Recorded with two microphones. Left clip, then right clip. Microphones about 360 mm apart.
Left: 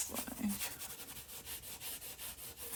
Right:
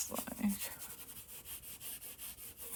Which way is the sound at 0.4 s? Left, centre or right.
Right.